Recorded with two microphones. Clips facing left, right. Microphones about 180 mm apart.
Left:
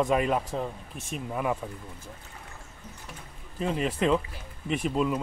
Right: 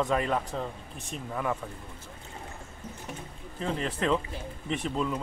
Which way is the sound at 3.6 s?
10° left (ahead or behind).